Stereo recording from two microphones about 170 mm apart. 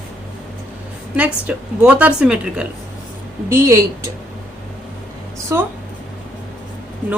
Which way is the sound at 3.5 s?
20° right (ahead or behind).